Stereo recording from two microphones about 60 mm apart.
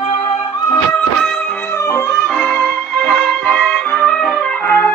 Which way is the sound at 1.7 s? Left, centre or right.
Left.